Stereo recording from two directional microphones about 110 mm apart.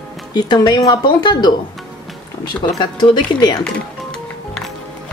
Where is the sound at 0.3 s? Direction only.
35° left (ahead or behind).